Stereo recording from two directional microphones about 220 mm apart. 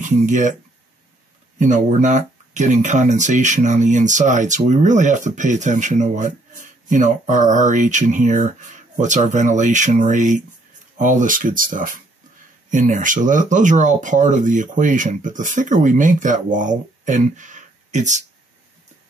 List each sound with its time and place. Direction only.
0.0 s speech: 35° right (ahead or behind)
1.6 s speech: 35° right (ahead or behind)